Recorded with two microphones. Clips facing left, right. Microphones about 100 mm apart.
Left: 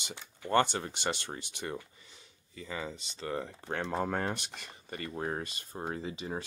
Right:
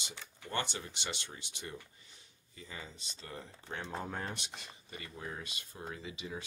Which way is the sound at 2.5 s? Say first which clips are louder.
Left 9 dB; 90° left.